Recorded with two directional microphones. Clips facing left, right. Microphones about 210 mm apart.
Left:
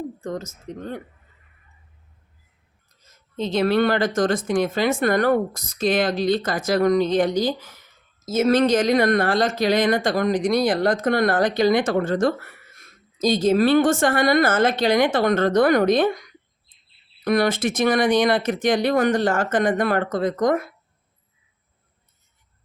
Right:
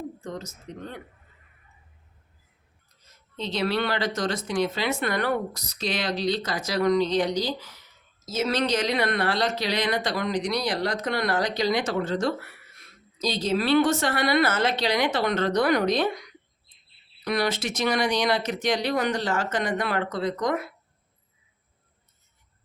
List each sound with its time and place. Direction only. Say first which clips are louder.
0.2 s speech: left 6 dB; 45° left (ahead or behind)
3.3 s speech: left 7 dB; 50° left (ahead or behind)